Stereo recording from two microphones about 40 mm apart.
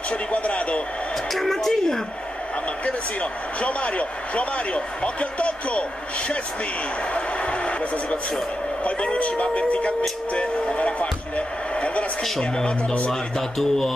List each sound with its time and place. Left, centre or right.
0.1 s a sound: left
1.3 s a sound: centre
2.8 s a man's voice: left
12.2 s speech: centre
12.6 s speech: left
13.1 s speech: centre